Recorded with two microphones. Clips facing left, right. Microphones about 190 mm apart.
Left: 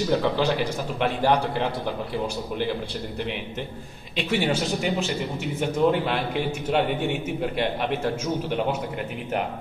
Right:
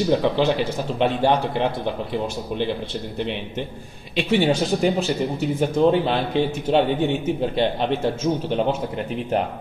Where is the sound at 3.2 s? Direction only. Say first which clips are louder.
Right 5 dB; 20° right (ahead or behind).